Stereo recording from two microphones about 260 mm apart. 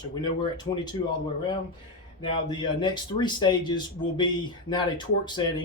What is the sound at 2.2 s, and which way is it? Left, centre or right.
Speech, centre.